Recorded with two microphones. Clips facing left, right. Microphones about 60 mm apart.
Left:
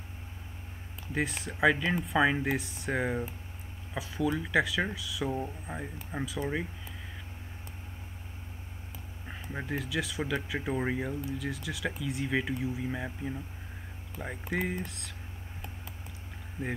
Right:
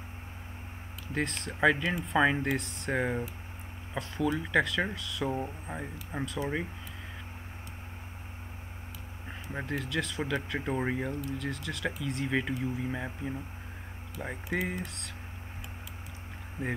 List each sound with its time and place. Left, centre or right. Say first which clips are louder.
1.1 s speech: even; centre
5.7 s speech: even; right
6.1 s speech: even; centre
9.3 s speech: even; centre